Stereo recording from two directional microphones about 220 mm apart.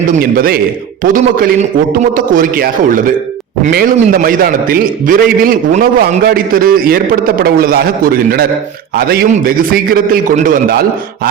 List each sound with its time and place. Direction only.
0.2 s a man's voice: 45° right (ahead or behind)